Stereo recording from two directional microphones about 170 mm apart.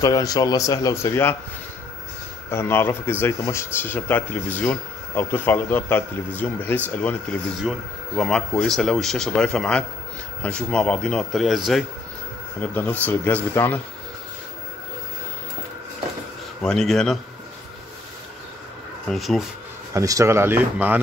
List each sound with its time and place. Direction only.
0.0 s a man's voice: 20° left (ahead or behind)
2.5 s speech: 15° left (ahead or behind)
8.2 s speech: 5° left (ahead or behind)
16.6 s speech: 5° left (ahead or behind)
19.0 s speech: centre (ahead or behind)
19.9 s speech: 20° right (ahead or behind)